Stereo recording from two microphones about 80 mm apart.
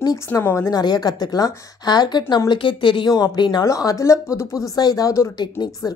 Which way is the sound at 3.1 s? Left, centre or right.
Left.